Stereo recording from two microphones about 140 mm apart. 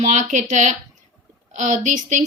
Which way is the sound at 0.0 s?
60° right (ahead or behind).